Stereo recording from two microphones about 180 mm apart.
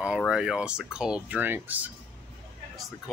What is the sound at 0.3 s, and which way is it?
Speech, 5° right (ahead or behind).